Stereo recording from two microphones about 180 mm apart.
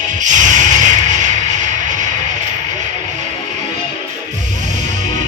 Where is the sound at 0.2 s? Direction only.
45° right (ahead or behind).